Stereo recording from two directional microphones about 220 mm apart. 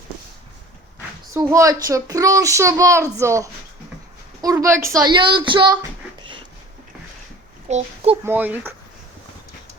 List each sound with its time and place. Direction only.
1.3 s a child's voice: 15° right (ahead or behind)
7.7 s a child's voice: 30° right (ahead or behind)
8.2 s a child's voice: 10° right (ahead or behind)